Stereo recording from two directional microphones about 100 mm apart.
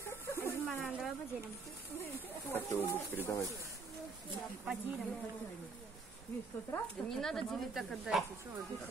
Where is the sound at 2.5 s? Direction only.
20° left (ahead or behind).